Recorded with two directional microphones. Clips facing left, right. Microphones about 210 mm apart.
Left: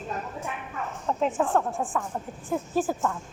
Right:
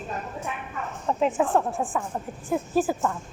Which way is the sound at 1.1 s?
5° right (ahead or behind).